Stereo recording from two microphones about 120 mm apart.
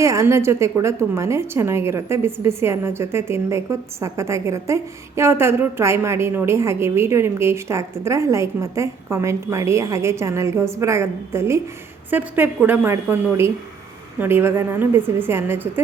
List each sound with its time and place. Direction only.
0.0 s a woman's voice: 25° right (ahead or behind)